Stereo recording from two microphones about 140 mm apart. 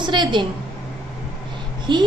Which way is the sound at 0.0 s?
35° right (ahead or behind).